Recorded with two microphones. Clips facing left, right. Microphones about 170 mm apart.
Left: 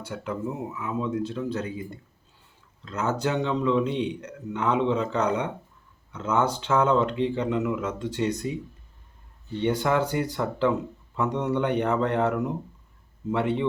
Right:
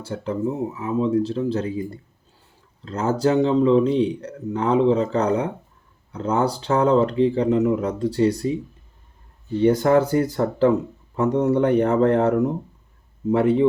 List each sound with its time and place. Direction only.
0.0 s a man's voice: 30° right (ahead or behind)
2.8 s a man's voice: 35° right (ahead or behind)
9.6 s a man's voice: 40° right (ahead or behind)